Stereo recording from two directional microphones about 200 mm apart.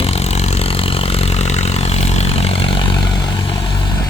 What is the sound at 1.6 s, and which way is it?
Vehicle, 30° left (ahead or behind).